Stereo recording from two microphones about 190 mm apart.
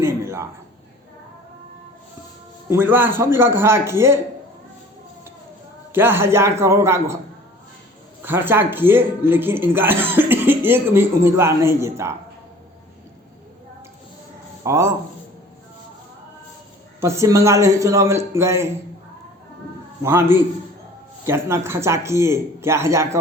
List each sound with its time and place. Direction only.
0.0 s a man's voice: 15° right (ahead or behind)
2.6 s speech: 10° right (ahead or behind)
5.9 s speech: 10° right (ahead or behind)
8.2 s speech: 10° right (ahead or behind)
14.6 s speech: 15° right (ahead or behind)
17.0 s speech: 15° right (ahead or behind)
20.0 s speech: 10° right (ahead or behind)